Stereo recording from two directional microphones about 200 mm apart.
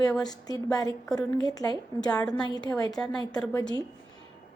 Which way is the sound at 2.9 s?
5° left (ahead or behind).